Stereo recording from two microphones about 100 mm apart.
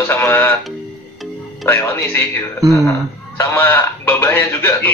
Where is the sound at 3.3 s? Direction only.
25° left (ahead or behind).